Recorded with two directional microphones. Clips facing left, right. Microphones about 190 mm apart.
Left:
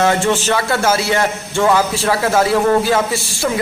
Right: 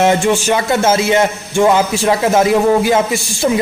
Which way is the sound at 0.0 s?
15° right (ahead or behind).